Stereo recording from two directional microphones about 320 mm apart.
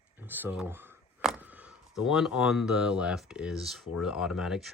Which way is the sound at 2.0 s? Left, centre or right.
Centre.